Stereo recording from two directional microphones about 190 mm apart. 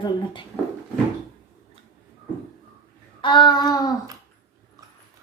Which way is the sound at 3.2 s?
25° left (ahead or behind).